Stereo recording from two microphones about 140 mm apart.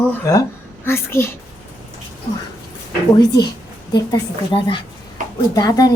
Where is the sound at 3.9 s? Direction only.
35° left (ahead or behind).